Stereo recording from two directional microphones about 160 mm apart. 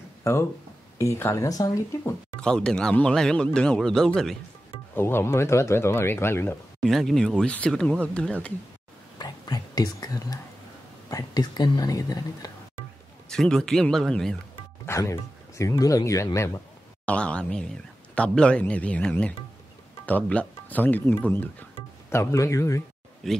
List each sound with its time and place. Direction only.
0.2 s speech: 15° left (ahead or behind)
2.4 s speech: 5° left (ahead or behind)
4.9 s speech: 15° left (ahead or behind)
6.8 s speech: centre (ahead or behind)
9.2 s whispering: 25° left (ahead or behind)
11.1 s speech: 25° left (ahead or behind)
13.3 s speech: 5° left (ahead or behind)
14.5 s speech: 15° left (ahead or behind)
17.0 s speech: 5° left (ahead or behind)
23.2 s speech: centre (ahead or behind)